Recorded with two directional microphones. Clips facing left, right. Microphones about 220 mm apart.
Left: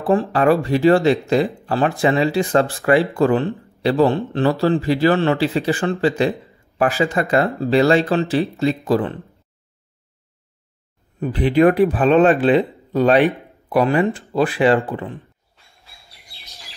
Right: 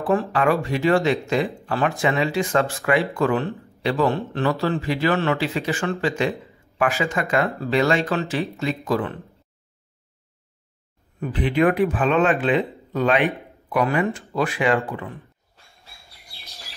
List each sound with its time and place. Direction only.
0.0 s speech: 35° left (ahead or behind)
11.1 s speech: 35° left (ahead or behind)